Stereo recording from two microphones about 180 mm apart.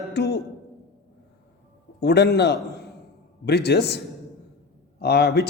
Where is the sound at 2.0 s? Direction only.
65° left (ahead or behind).